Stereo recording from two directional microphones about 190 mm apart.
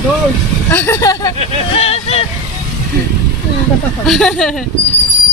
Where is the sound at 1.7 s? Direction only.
30° left (ahead or behind).